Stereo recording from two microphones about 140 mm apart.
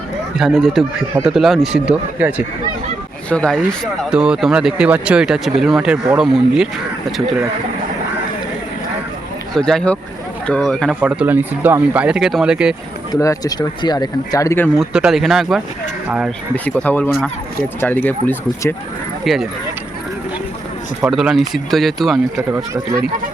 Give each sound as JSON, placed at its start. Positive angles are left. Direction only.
{"t": 0.3, "sound": "speech", "side_deg": 0}
{"t": 3.2, "sound": "speech", "side_deg": 5}
{"t": 9.6, "sound": "speech", "side_deg": 5}
{"t": 11.0, "sound": "speech", "side_deg": -10}
{"t": 13.1, "sound": "speech", "side_deg": 25}
{"t": 14.8, "sound": "speech", "side_deg": -5}
{"t": 16.6, "sound": "speech", "side_deg": 10}
{"t": 19.2, "sound": "speech", "side_deg": 0}
{"t": 21.1, "sound": "speech", "side_deg": 0}
{"t": 22.4, "sound": "speech", "side_deg": -20}